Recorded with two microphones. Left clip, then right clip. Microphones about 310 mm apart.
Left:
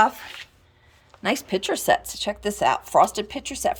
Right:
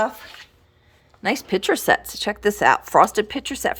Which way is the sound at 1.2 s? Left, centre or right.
Centre.